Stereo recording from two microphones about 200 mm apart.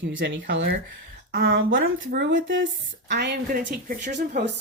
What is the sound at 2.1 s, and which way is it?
Speech, 45° right (ahead or behind).